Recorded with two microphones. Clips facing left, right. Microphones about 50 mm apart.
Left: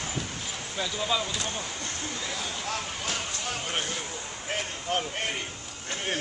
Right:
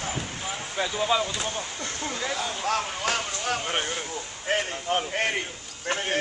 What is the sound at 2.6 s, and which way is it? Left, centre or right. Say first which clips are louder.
Speech: right 10 dB; right.